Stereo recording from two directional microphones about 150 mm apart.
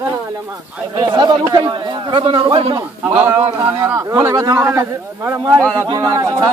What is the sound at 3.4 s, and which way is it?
Speech, 35° right (ahead or behind).